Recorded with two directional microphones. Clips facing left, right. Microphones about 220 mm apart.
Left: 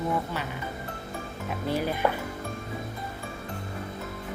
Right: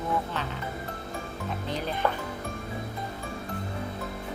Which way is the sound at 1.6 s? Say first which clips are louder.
Left 4 dB; 10° left (ahead or behind).